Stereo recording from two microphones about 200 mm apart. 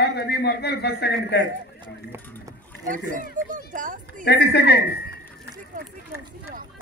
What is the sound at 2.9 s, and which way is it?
Speech, 40° right (ahead or behind).